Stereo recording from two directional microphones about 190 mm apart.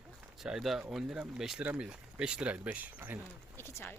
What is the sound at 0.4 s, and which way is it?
Speech, centre (ahead or behind).